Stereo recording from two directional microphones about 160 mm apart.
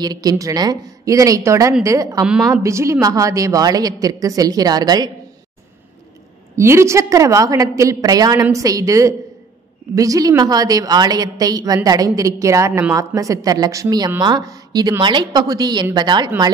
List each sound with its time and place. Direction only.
0.0 s a woman's voice: 25° right (ahead or behind)
6.5 s a woman's voice: 15° right (ahead or behind)